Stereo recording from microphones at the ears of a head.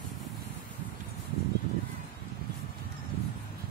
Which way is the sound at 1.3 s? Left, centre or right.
Right.